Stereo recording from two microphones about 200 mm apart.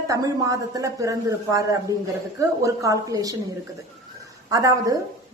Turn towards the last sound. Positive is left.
turn(degrees=-15)  # may be behind; listen again after turning